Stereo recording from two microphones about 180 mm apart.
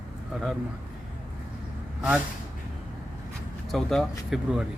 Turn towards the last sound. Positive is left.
turn(degrees=0)  # may be behind; listen again after turning